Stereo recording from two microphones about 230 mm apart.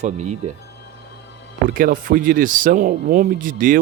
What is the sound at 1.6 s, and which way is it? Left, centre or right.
A man's voice, right.